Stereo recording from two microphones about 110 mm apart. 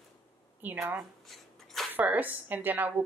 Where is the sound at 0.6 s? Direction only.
15° right (ahead or behind).